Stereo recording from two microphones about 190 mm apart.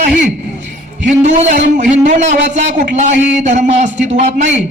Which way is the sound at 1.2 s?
40° right (ahead or behind).